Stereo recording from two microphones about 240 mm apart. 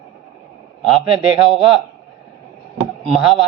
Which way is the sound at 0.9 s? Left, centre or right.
Right.